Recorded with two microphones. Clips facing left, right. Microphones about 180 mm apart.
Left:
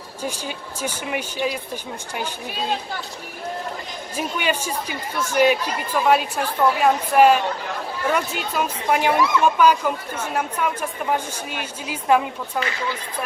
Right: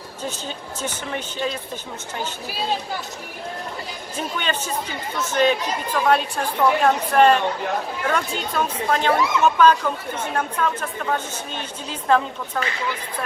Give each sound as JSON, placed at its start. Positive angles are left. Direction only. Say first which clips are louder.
{"t": 0.2, "sound": "speech", "louder": "left 2 dB", "side_deg": 10}
{"t": 4.2, "sound": "speech", "louder": "left 2 dB", "side_deg": 10}